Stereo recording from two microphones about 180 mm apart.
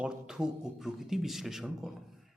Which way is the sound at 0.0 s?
5° right (ahead or behind).